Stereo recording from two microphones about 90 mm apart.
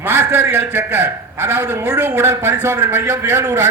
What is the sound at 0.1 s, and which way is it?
A man's voice, 25° right (ahead or behind).